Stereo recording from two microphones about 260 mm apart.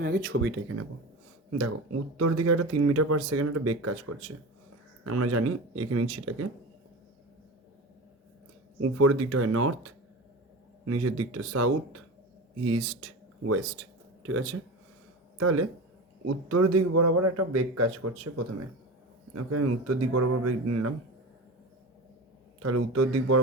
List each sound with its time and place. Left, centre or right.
0.0 s speech: right
0.3 s speech: right
1.5 s speech: right
8.8 s a man's voice: right
22.6 s speech: right